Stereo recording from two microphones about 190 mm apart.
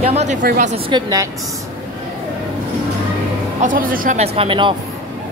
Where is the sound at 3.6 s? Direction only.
45° right (ahead or behind).